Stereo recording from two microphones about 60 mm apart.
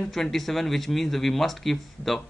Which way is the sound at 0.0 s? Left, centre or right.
Centre.